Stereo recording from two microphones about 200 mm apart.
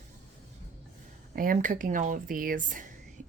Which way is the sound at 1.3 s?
40° right (ahead or behind).